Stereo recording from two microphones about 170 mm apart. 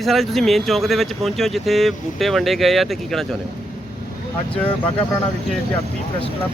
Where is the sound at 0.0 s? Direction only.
Centre (ahead or behind).